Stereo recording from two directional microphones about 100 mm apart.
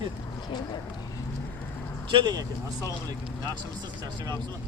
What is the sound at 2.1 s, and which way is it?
Speech, 50° right (ahead or behind).